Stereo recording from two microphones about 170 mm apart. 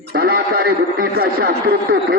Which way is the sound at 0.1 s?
65° right (ahead or behind).